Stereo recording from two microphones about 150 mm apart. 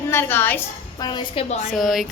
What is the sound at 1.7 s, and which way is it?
Speech, centre (ahead or behind).